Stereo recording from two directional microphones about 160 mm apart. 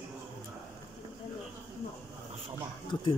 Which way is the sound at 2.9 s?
30° left (ahead or behind).